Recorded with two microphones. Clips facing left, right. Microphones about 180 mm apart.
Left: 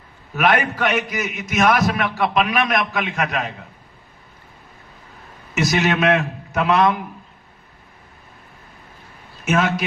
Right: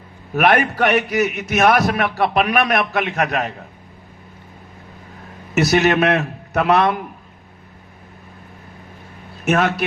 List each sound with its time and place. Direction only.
0.3 s a man's voice: 40° right (ahead or behind)
5.5 s a man's voice: 35° right (ahead or behind)
9.4 s speech: 40° right (ahead or behind)